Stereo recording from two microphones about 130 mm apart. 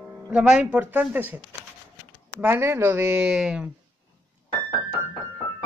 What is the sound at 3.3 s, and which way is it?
Speech, 5° right (ahead or behind).